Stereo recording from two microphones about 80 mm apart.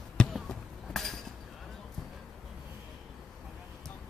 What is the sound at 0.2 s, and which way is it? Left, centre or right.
Basketball bounce, centre.